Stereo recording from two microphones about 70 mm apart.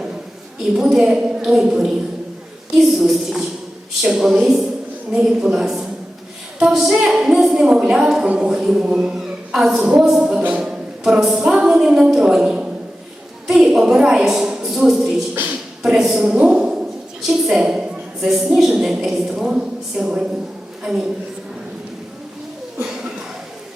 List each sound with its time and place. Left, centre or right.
0.7 s a woman's voice: centre
16.2 s a woman's voice: centre
22.9 s a sound: centre